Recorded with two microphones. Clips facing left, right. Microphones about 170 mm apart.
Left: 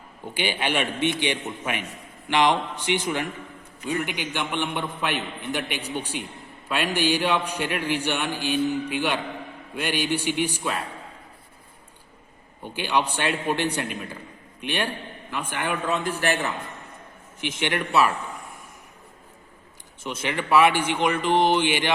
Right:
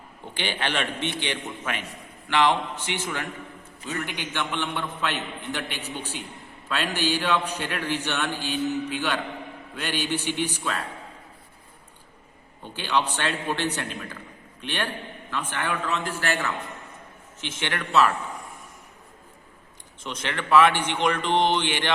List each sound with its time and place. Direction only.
0.3 s a man's voice: 10° left (ahead or behind)
12.6 s a man's voice: 10° left (ahead or behind)
20.1 s a man's voice: 10° left (ahead or behind)